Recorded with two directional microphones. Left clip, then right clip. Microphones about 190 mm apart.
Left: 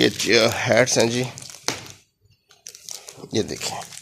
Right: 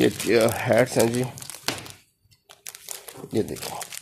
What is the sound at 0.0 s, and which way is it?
Speech, centre (ahead or behind).